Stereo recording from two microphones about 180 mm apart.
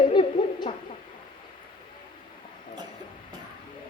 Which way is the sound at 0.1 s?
25° left (ahead or behind).